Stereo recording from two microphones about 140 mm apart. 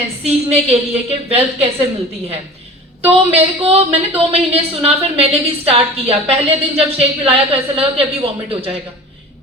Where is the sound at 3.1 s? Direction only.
45° right (ahead or behind).